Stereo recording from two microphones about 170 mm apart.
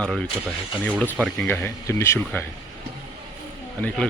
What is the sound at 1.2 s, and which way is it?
Speech, 5° left (ahead or behind).